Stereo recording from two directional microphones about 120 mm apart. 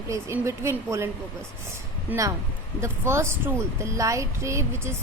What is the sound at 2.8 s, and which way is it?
Speech, 20° right (ahead or behind).